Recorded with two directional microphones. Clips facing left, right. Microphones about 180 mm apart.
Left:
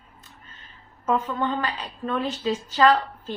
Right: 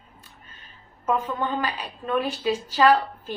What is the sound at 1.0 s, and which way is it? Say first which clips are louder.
A woman's voice: left 1 dB; 10° right (ahead or behind).